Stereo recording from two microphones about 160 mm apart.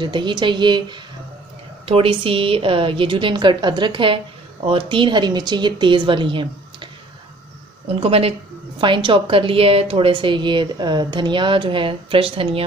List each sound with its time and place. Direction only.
0.0 s a woman's voice: 30° right (ahead or behind)
7.9 s a woman's voice: 35° right (ahead or behind)